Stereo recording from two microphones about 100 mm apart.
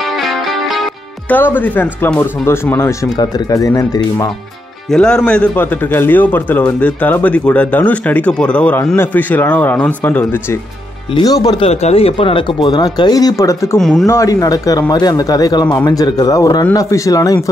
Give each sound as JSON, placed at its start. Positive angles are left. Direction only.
{"t": 1.3, "sound": "speech", "side_deg": 20}
{"t": 4.9, "sound": "a man's voice", "side_deg": 10}
{"t": 11.2, "sound": "speech", "side_deg": 40}
{"t": 11.6, "sound": "speech", "side_deg": 85}
{"t": 13.7, "sound": "speech", "side_deg": 5}
{"t": 14.0, "sound": "speech", "side_deg": 30}